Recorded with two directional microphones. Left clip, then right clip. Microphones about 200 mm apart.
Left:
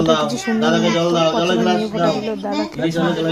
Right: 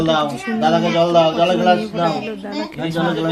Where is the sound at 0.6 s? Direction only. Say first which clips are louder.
Right 2 dB; 45° right (ahead or behind).